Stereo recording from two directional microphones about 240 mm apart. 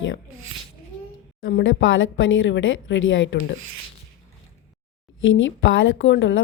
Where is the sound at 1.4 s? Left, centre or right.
Left.